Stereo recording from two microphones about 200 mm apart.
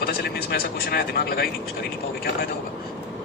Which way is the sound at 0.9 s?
50° left (ahead or behind).